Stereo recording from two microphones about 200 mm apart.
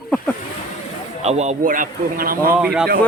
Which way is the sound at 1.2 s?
35° right (ahead or behind).